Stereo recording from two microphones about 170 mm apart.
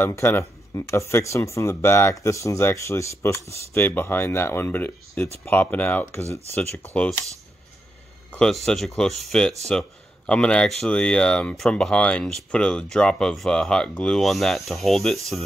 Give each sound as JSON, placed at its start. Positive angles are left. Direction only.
{"t": 0.0, "sound": "speech", "side_deg": 15}
{"t": 8.3, "sound": "speech", "side_deg": 5}